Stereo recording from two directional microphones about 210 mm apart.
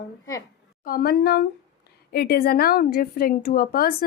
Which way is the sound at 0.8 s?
45° left (ahead or behind).